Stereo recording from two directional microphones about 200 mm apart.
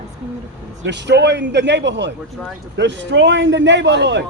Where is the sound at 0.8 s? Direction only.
60° right (ahead or behind).